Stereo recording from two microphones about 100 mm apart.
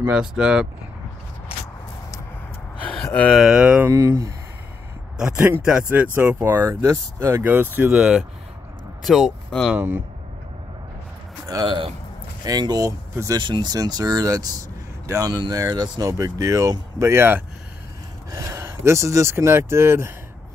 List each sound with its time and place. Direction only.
0.1 s speech: 10° right (ahead or behind)
2.8 s a sound: 15° left (ahead or behind)
3.5 s speech: 10° right (ahead or behind)
3.9 s speech: 25° right (ahead or behind)
5.1 s speech: 5° right (ahead or behind)
7.9 s speech: 10° right (ahead or behind)
9.7 s speech: 15° right (ahead or behind)
11.6 s speech: 55° right (ahead or behind)
12.4 s speech: 40° right (ahead or behind)
13.4 s speech: 50° right (ahead or behind); by 20.1 s 25° right (ahead or behind)